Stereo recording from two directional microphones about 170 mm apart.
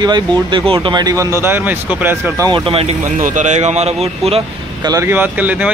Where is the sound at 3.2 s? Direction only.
45° right (ahead or behind).